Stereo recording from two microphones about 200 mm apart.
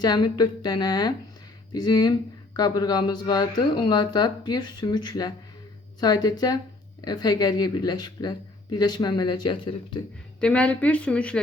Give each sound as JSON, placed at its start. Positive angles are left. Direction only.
{"t": 0.0, "sound": "speech", "side_deg": 20}
{"t": 10.4, "sound": "a woman's voice", "side_deg": 5}